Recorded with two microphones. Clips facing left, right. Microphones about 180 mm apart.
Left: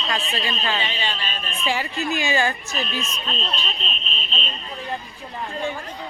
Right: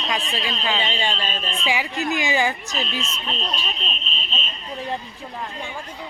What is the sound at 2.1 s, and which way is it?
Speech, 15° right (ahead or behind).